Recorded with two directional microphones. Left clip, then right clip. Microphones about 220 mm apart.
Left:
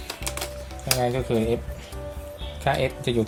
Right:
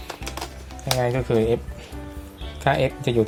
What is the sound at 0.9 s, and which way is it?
Speech, 25° right (ahead or behind).